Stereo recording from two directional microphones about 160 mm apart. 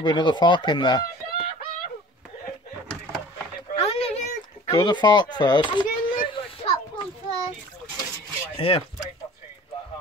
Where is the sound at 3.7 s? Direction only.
40° left (ahead or behind).